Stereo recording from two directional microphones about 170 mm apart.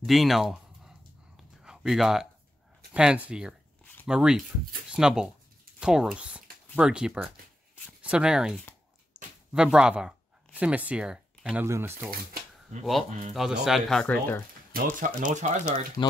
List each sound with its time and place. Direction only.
0.0 s a sound: centre (ahead or behind)
2.9 s speech: 5° right (ahead or behind)
13.3 s speech: centre (ahead or behind)
14.7 s speech: 50° right (ahead or behind)